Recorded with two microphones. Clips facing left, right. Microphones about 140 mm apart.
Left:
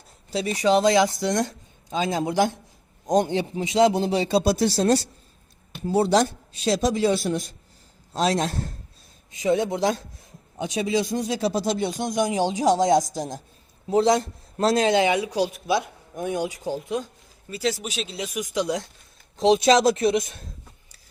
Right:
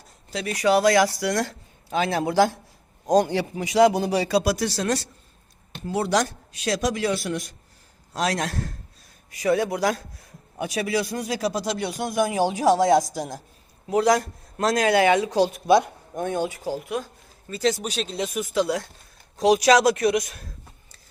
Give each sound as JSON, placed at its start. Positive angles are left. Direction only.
{"t": 0.6, "sound": "a man's voice", "side_deg": 20}
{"t": 15.3, "sound": "speech", "side_deg": -40}
{"t": 16.2, "sound": "speech", "side_deg": 15}
{"t": 17.5, "sound": "speech", "side_deg": 10}
{"t": 17.8, "sound": "speech", "side_deg": -40}
{"t": 18.3, "sound": "speech", "side_deg": 20}